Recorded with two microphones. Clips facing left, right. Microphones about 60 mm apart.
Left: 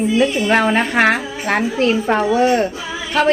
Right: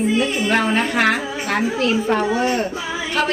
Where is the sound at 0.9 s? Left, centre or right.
Left.